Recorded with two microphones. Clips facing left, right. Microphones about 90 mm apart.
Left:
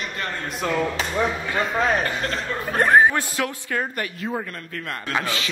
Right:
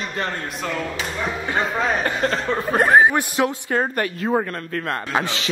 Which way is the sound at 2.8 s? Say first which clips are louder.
Right 1 dB; 15° right (ahead or behind).